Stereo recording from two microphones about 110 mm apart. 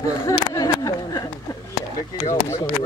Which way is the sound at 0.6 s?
35° left (ahead or behind).